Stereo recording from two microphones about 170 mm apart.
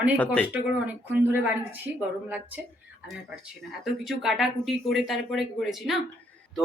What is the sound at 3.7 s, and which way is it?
Speech, centre (ahead or behind).